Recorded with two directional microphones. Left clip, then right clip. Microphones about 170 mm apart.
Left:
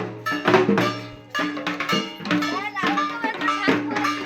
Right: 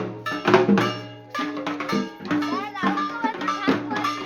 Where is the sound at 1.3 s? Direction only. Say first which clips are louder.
Left 2 dB; 90° right.